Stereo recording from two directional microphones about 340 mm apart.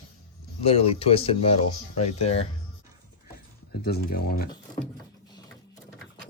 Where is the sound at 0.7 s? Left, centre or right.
Centre.